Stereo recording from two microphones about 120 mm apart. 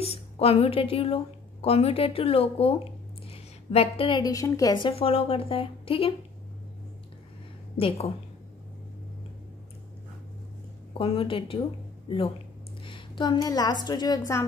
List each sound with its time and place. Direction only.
0.0 s a woman's voice: 55° left (ahead or behind)
3.3 s a sound: 55° left (ahead or behind)
4.2 s a woman's voice: 30° left (ahead or behind)
4.7 s a woman's voice: 50° left (ahead or behind)
10.9 s a woman's voice: 50° left (ahead or behind); by 14.4 s 30° left (ahead or behind)